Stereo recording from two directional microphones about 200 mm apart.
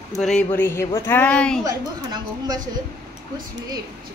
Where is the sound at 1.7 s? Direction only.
20° right (ahead or behind).